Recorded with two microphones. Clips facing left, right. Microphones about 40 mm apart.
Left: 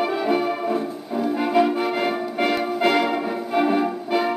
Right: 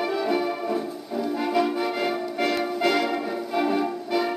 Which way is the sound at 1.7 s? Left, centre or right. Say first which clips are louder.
Left 3 dB; centre.